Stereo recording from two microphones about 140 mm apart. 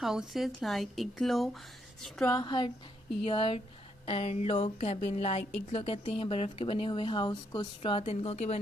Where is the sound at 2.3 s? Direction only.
30° left (ahead or behind).